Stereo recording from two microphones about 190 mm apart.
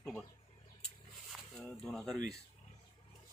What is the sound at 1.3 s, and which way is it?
Speech, 5° left (ahead or behind).